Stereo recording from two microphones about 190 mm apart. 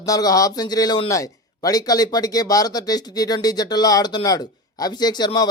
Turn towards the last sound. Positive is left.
turn(degrees=20)  # may be behind; listen again after turning